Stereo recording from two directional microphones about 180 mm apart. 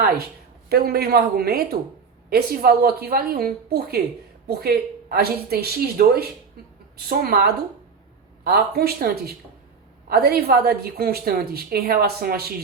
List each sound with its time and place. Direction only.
0.7 s a woman's voice: 60° right (ahead or behind)